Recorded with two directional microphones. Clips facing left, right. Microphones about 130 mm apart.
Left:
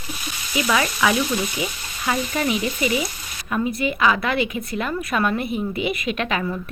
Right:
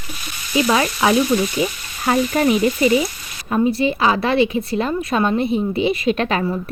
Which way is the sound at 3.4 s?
30° right (ahead or behind).